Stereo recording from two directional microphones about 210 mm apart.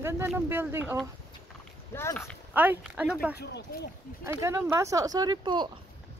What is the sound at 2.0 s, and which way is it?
Speech, 10° left (ahead or behind).